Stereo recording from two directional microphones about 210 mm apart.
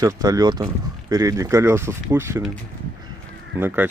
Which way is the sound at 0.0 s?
15° right (ahead or behind).